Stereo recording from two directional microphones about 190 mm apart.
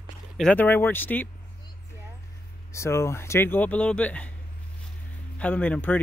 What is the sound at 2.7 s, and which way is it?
Speech, 15° left (ahead or behind).